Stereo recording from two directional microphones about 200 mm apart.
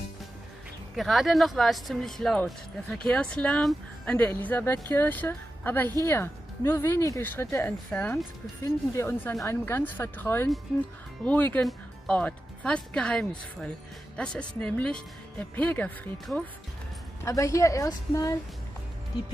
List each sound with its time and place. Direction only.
0.9 s speech: centre (ahead or behind); by 18.4 s 15° left (ahead or behind)